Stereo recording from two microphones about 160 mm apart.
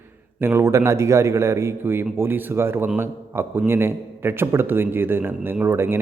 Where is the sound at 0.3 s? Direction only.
15° right (ahead or behind).